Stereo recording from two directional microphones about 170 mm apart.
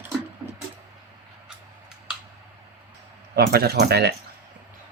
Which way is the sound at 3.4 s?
70° right (ahead or behind).